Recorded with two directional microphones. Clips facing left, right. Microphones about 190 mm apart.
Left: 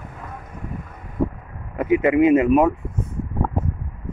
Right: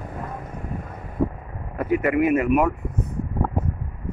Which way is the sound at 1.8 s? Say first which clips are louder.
Left 4 dB; 20° left (ahead or behind).